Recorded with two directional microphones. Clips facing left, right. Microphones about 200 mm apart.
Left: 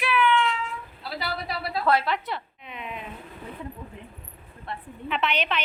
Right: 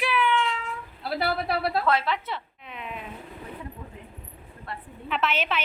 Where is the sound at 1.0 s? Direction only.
60° right (ahead or behind).